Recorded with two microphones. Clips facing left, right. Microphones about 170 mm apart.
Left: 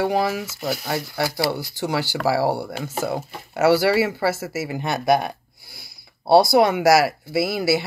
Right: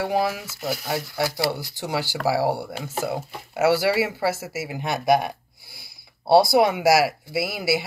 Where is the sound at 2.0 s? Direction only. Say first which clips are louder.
Left 1 dB; 15° right (ahead or behind).